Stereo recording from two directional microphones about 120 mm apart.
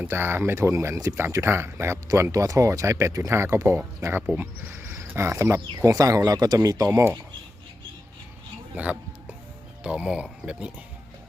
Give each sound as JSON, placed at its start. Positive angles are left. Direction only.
{"t": 0.0, "sound": "speech", "side_deg": -20}
{"t": 8.7, "sound": "speech", "side_deg": -10}